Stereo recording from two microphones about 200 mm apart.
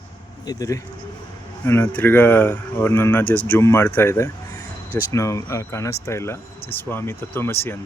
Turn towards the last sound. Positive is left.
turn(degrees=10)  # may be behind; listen again after turning